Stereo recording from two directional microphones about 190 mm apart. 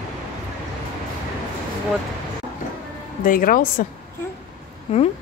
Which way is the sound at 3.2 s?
45° left (ahead or behind).